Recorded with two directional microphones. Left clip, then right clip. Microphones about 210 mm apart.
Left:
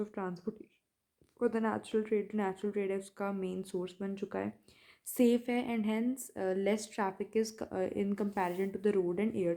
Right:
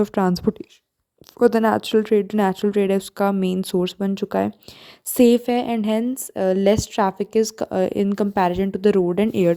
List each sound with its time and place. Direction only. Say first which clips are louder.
0.0 s a woman's voice: right 19 dB; 55° right (ahead or behind)